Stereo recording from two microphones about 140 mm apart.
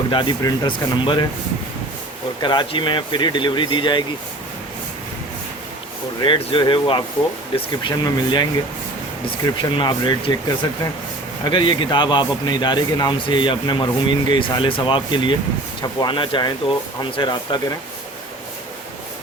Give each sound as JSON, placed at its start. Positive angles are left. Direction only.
{"t": 0.1, "sound": "a man's voice", "side_deg": 35}
{"t": 2.4, "sound": "a man's voice", "side_deg": 35}
{"t": 6.2, "sound": "a man's voice", "side_deg": 35}